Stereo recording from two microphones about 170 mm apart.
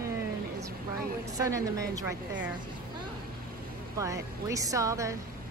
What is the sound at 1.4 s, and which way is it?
Speech, 20° right (ahead or behind).